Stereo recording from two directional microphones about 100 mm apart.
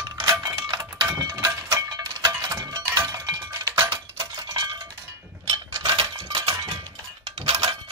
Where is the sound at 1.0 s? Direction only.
30° right (ahead or behind).